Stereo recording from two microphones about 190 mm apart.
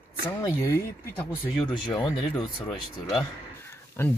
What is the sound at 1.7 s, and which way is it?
Speech, 20° left (ahead or behind).